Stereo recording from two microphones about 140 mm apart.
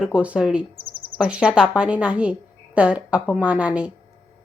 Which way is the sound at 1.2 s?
5° right (ahead or behind).